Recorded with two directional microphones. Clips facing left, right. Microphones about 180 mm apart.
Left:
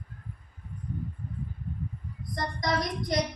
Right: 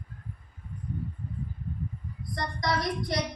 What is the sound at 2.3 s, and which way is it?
Speech, 20° left (ahead or behind).